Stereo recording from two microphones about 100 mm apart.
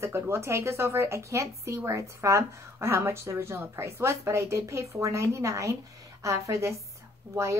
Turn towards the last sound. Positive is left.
turn(degrees=-30)  # may be behind; listen again after turning